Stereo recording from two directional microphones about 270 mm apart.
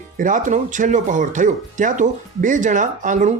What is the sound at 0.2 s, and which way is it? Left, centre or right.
Speech, right.